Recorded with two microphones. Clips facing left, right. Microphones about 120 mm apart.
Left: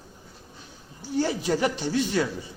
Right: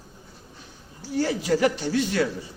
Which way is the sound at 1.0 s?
20° left (ahead or behind).